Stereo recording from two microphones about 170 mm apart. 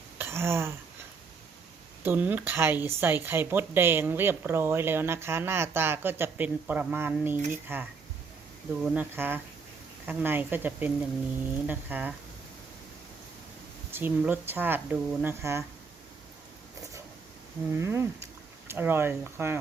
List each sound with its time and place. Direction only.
0.2 s a sound: 15° right (ahead or behind)
2.0 s speech: 10° right (ahead or behind)
13.9 s speech: 10° right (ahead or behind)
17.7 s speech: 15° right (ahead or behind)